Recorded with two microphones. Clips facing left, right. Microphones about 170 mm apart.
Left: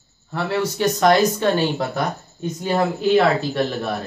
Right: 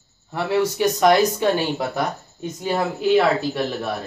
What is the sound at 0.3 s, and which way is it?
A man's voice, 15° right (ahead or behind).